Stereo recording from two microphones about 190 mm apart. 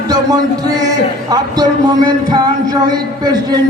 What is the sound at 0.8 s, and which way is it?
Speech, 20° right (ahead or behind).